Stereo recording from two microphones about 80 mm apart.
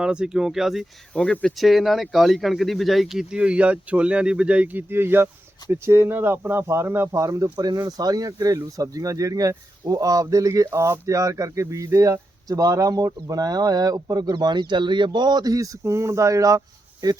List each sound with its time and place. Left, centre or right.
0.0 s speech: centre
1.1 s speech: centre
1.5 s speech: centre; by 7.5 s right
7.5 s speech: right